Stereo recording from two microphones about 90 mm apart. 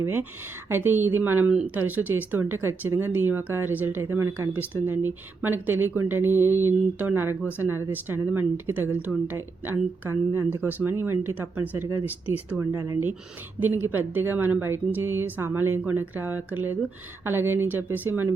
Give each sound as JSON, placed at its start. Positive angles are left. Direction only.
{"t": 0.0, "sound": "speech", "side_deg": -25}
{"t": 12.7, "sound": "speech", "side_deg": -35}
{"t": 13.6, "sound": "speech", "side_deg": -20}